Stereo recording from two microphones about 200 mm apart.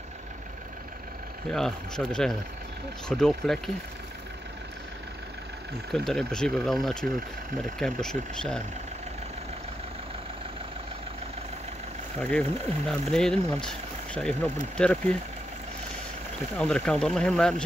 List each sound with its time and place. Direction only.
1.5 s speech: 5° left (ahead or behind)
5.9 s speech: 5° left (ahead or behind)
12.2 s speech: 5° left (ahead or behind)
16.5 s speech: 5° left (ahead or behind)